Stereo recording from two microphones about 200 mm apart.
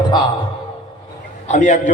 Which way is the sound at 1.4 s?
35° left (ahead or behind).